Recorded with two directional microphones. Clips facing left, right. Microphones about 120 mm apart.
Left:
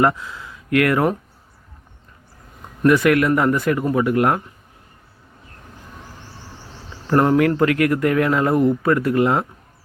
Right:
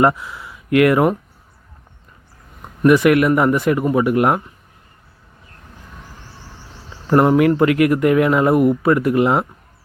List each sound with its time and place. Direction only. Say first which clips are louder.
0.0 s speech: right 2 dB; 20° right (ahead or behind)
2.8 s speech: right 3 dB; 20° right (ahead or behind)
7.1 s speech: right 3 dB; 10° right (ahead or behind)